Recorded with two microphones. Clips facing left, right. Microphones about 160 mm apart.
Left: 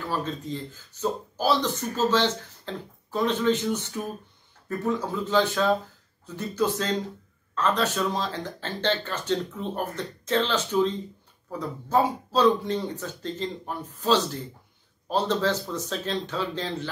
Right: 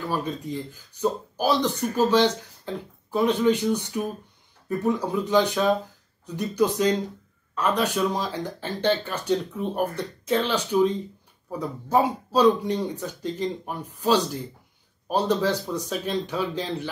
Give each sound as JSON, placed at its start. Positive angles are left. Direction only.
{"t": 0.1, "sound": "speech", "side_deg": -15}